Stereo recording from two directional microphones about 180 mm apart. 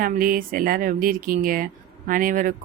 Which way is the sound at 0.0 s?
50° right (ahead or behind).